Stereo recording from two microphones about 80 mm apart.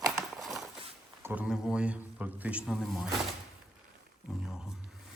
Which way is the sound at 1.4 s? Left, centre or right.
Centre.